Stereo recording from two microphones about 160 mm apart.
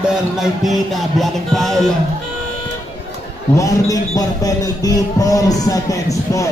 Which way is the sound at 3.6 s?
20° left (ahead or behind).